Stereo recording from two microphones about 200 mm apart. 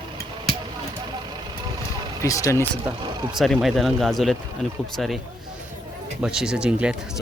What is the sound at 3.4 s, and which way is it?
Speech, centre (ahead or behind).